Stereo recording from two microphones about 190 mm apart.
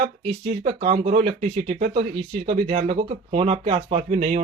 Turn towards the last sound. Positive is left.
turn(degrees=-35)  # may be behind; listen again after turning